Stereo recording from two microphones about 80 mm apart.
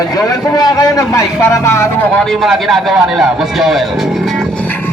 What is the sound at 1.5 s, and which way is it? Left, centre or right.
Vehicle, left.